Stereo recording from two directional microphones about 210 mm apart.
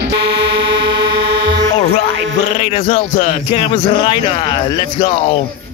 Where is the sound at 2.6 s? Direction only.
30° left (ahead or behind).